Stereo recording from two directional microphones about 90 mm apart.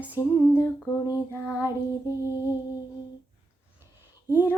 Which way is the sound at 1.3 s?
25° left (ahead or behind).